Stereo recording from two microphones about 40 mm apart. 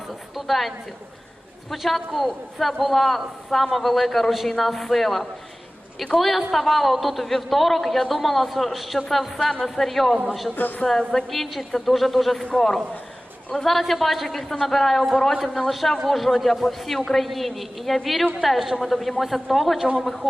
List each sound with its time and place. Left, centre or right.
0.1 s a sound: centre
1.7 s a man's voice: centre
10.5 s a man's voice: left
10.8 s a man's voice: centre